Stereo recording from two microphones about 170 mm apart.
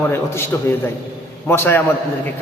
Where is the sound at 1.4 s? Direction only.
15° left (ahead or behind).